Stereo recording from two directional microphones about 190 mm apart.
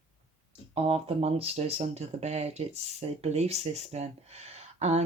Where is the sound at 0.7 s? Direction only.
30° right (ahead or behind).